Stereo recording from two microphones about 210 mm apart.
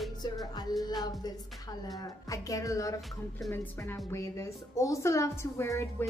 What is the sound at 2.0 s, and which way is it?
A woman's voice, 15° left (ahead or behind).